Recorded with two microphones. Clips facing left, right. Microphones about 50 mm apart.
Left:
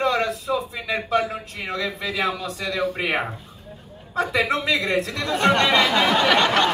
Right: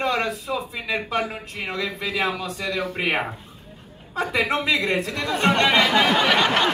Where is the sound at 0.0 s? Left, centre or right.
Right.